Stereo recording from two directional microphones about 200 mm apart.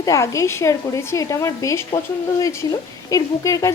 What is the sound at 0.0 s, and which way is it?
A woman's voice, 15° left (ahead or behind).